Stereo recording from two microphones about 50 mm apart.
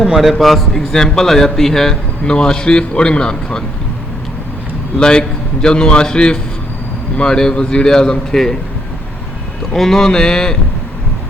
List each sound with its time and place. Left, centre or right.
0.1 s a man's voice: centre
4.9 s a man's voice: centre
9.7 s a man's voice: centre